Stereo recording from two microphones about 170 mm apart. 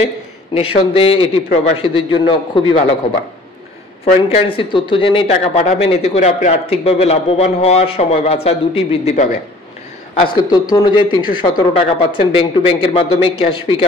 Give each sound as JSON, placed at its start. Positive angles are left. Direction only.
{"t": 0.6, "sound": "speech", "side_deg": 35}
{"t": 4.0, "sound": "speech", "side_deg": 35}
{"t": 10.3, "sound": "speech", "side_deg": 25}